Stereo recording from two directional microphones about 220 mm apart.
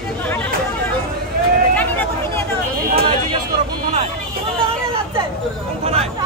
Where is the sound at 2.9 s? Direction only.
25° right (ahead or behind).